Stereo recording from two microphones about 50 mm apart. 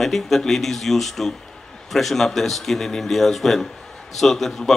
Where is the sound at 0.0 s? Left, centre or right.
Centre.